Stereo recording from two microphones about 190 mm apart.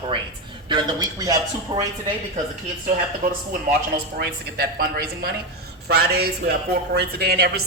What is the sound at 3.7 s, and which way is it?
Speech, 55° right (ahead or behind).